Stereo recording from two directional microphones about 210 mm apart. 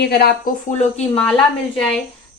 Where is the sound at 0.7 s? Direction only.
30° left (ahead or behind).